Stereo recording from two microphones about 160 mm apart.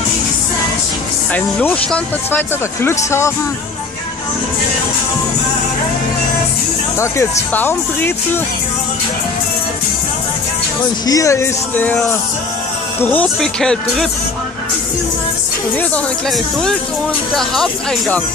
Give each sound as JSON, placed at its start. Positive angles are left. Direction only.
{"t": 1.3, "sound": "speech", "side_deg": 10}
{"t": 7.0, "sound": "speech", "side_deg": 15}
{"t": 11.1, "sound": "speech", "side_deg": 20}
{"t": 17.4, "sound": "speech", "side_deg": 0}